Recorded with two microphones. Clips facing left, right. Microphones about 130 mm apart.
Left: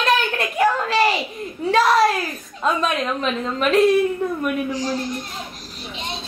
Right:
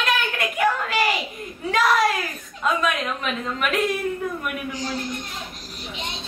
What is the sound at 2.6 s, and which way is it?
Speech, 30° left (ahead or behind).